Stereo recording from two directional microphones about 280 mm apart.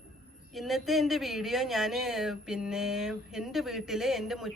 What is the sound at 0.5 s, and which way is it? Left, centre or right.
Speech, centre.